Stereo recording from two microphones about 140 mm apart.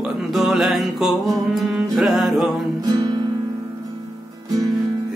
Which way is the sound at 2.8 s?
30° right (ahead or behind).